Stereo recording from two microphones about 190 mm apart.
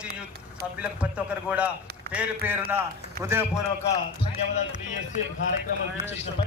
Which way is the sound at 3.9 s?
35° left (ahead or behind).